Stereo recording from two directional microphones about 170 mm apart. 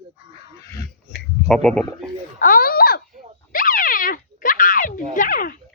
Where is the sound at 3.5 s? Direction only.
55° left (ahead or behind).